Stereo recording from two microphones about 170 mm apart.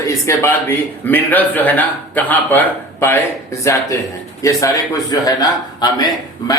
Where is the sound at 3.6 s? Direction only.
15° left (ahead or behind).